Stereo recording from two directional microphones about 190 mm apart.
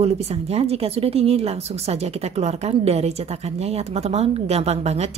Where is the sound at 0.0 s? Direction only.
35° right (ahead or behind).